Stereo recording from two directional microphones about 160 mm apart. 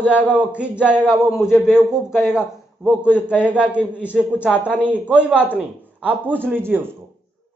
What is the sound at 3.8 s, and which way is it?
Speech, 10° left (ahead or behind).